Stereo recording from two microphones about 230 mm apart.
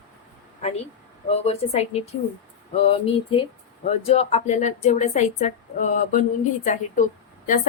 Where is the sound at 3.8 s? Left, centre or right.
Left.